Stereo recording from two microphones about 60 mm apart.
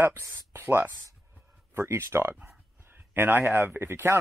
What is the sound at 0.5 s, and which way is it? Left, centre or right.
A man's voice, right.